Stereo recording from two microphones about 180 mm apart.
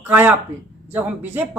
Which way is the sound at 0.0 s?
10° right (ahead or behind).